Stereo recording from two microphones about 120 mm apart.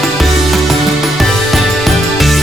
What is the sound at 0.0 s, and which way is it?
Music, centre (ahead or behind).